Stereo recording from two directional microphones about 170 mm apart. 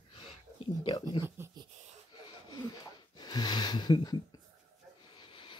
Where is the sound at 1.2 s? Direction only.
15° right (ahead or behind).